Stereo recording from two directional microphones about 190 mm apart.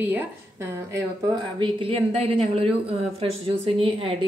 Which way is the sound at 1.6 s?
30° right (ahead or behind).